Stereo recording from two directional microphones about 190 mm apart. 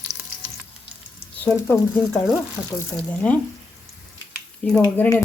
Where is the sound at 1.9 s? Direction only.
Centre (ahead or behind).